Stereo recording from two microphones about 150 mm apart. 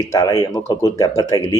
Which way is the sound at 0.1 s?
20° left (ahead or behind).